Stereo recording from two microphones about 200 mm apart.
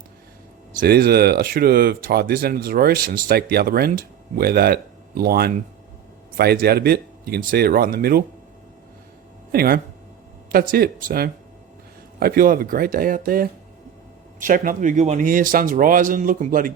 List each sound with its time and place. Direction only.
0.8 s speech: 50° right (ahead or behind)
9.5 s speech: 50° right (ahead or behind)